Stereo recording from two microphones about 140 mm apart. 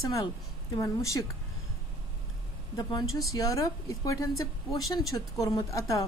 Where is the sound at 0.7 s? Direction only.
20° left (ahead or behind).